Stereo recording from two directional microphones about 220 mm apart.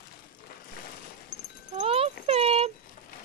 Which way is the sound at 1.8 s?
25° right (ahead or behind).